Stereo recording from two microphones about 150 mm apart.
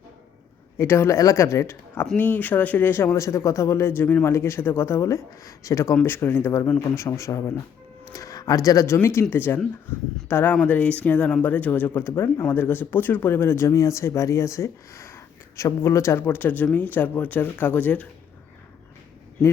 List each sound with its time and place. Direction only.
0.8 s speech: 15° left (ahead or behind)